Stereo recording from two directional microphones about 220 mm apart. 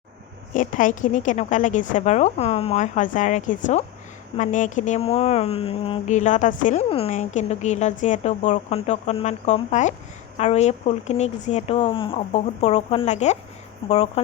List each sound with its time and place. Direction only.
0.5 s speech: 35° left (ahead or behind)